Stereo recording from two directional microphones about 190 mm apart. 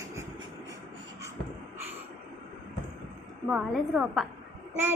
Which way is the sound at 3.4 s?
5° right (ahead or behind).